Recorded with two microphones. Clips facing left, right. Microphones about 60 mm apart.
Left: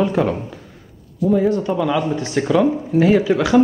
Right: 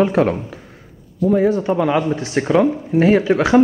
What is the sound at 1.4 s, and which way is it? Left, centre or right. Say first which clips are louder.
Speech: right 3 dB; right.